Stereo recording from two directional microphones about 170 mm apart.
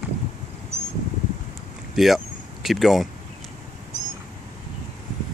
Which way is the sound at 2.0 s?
Centre (ahead or behind).